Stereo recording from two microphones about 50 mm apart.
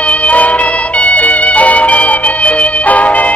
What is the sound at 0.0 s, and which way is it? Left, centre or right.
Music, left.